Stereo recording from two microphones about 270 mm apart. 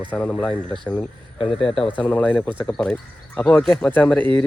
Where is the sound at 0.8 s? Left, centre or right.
Centre.